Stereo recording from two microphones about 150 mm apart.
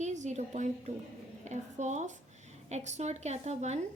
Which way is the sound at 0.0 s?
50° right (ahead or behind).